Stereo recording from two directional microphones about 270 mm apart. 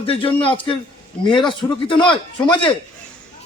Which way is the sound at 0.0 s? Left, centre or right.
Centre.